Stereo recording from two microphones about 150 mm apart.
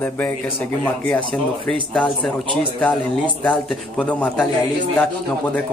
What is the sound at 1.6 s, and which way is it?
Speech, centre (ahead or behind).